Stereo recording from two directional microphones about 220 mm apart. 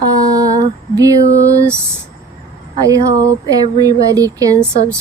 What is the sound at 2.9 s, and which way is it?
Speech, 15° right (ahead or behind).